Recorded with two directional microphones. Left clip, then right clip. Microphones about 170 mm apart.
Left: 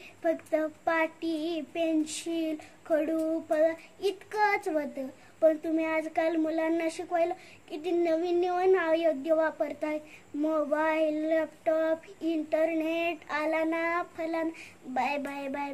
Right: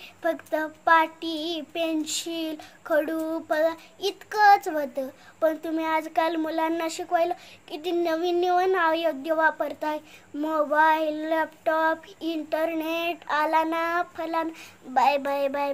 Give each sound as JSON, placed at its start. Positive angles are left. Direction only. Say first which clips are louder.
{"t": 0.6, "sound": "child singing", "louder": "right 12 dB", "side_deg": 10}